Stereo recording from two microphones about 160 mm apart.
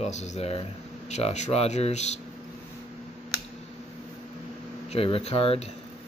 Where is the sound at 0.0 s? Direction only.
45° left (ahead or behind).